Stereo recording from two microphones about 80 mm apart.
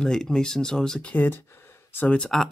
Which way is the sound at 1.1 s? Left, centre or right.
Centre.